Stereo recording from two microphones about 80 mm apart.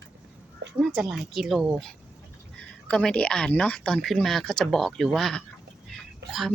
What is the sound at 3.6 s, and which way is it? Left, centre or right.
Female singing, centre.